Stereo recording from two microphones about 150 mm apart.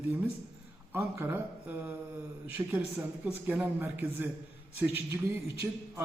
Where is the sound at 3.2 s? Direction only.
10° right (ahead or behind).